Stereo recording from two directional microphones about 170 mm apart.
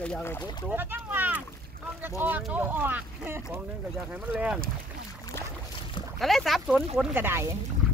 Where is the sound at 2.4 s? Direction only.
10° right (ahead or behind).